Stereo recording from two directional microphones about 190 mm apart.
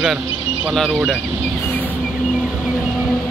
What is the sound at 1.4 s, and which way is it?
Vehicle, 10° left (ahead or behind).